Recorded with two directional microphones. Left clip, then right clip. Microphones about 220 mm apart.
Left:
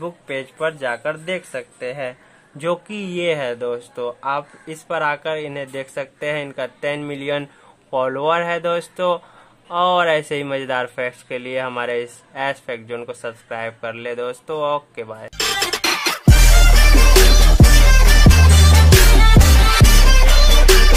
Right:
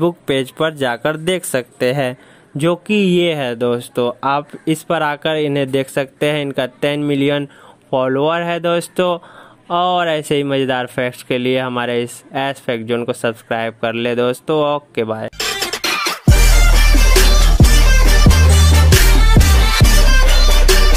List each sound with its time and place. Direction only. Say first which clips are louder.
0.0 s speech: right 10 dB; 45° right (ahead or behind)
2.6 s speech: right 7 dB; 30° right (ahead or behind)
15.3 s music: even; centre (ahead or behind)